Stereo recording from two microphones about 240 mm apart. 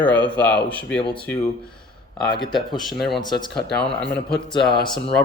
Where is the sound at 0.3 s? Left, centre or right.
Centre.